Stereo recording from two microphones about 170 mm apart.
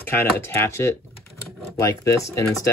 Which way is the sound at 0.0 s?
15° left (ahead or behind).